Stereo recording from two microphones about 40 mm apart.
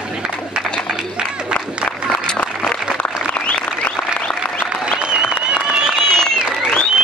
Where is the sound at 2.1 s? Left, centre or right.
Left.